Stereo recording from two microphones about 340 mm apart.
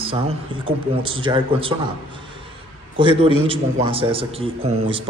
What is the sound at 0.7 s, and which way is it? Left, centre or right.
A man's voice, centre.